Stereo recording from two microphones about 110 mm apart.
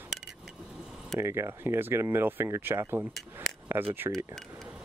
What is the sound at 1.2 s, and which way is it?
Speech, 25° right (ahead or behind).